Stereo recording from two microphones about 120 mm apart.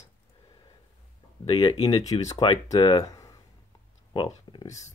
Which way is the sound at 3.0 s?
30° left (ahead or behind).